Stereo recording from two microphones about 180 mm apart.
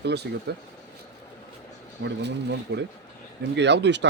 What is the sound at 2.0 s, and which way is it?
Speech, 90° right.